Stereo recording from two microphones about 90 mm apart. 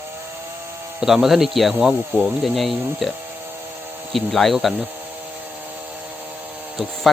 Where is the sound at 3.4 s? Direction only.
20° right (ahead or behind).